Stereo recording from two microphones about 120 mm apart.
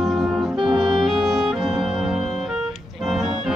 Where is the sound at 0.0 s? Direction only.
Centre (ahead or behind).